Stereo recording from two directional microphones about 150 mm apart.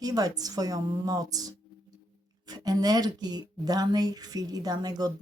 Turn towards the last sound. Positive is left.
turn(degrees=-25)  # may be behind; listen again after turning